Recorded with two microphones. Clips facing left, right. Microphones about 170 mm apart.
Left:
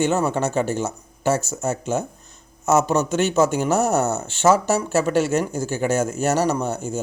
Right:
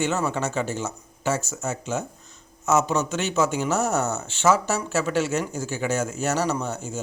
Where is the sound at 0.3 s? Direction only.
55° left (ahead or behind).